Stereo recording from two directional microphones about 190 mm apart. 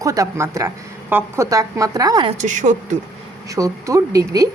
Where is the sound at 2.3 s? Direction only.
40° right (ahead or behind).